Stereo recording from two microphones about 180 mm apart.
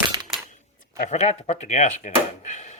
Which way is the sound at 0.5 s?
40° left (ahead or behind).